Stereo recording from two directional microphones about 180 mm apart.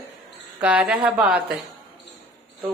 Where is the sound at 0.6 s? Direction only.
10° right (ahead or behind).